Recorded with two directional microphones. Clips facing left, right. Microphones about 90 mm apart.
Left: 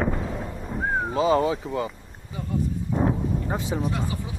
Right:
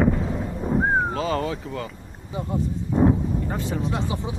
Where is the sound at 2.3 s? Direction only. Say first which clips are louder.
Right 2 dB; 25° right (ahead or behind).